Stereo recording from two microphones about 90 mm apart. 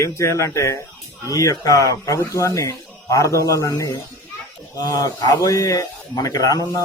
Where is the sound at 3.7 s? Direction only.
50° left (ahead or behind).